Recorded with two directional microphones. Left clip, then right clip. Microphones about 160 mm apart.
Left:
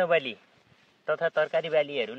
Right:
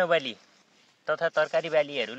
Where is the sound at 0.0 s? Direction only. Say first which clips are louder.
Even; 20° left (ahead or behind).